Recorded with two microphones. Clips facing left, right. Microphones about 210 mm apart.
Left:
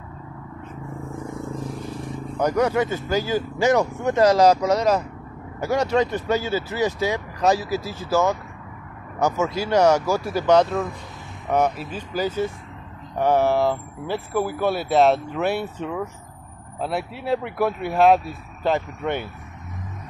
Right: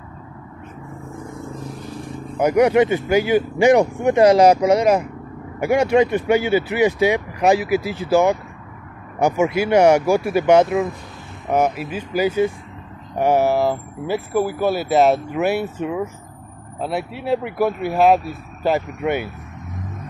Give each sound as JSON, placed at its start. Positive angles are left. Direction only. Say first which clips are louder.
{"t": 2.3, "sound": "speech", "louder": "right 6 dB", "side_deg": -10}